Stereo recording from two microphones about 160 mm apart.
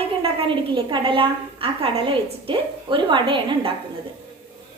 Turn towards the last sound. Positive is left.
turn(degrees=-30)  # may be behind; listen again after turning